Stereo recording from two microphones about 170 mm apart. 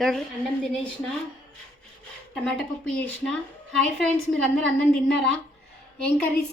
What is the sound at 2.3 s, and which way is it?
Speech, 5° left (ahead or behind).